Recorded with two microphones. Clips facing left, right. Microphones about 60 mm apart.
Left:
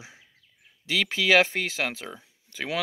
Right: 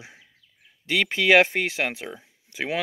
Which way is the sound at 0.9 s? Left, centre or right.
Centre.